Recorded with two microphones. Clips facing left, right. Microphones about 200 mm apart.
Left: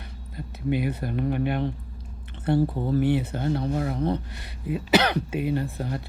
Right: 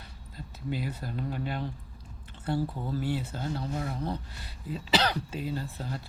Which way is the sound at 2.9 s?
60° left (ahead or behind).